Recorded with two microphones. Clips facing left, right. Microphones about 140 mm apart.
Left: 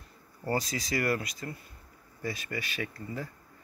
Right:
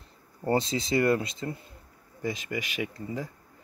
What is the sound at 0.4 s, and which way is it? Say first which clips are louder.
Speech: right 5 dB; 25° right (ahead or behind).